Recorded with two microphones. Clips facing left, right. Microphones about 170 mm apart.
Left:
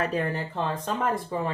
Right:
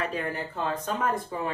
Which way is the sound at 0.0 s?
35° left (ahead or behind).